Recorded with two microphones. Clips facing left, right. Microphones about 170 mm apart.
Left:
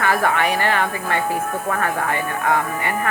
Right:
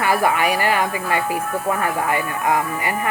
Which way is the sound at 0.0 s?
10° right (ahead or behind).